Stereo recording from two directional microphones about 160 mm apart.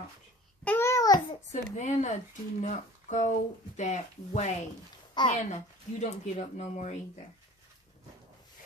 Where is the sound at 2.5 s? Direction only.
50° left (ahead or behind).